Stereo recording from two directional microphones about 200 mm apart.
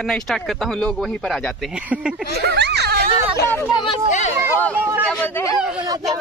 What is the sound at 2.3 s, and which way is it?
Speech, 55° right (ahead or behind).